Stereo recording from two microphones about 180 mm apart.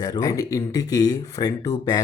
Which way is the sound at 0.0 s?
20° left (ahead or behind).